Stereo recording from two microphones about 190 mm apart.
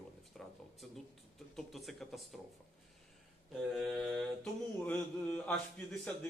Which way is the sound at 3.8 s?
Centre (ahead or behind).